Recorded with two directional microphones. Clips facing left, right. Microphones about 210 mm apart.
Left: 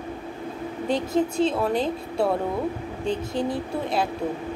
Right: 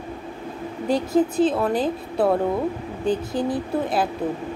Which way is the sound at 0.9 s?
25° left (ahead or behind).